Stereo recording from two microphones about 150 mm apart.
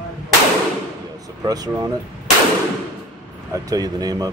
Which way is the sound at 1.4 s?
25° right (ahead or behind).